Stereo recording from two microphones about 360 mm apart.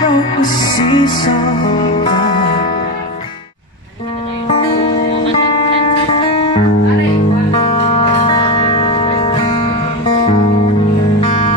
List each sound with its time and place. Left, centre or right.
0.0 s music: centre
6.1 s music: centre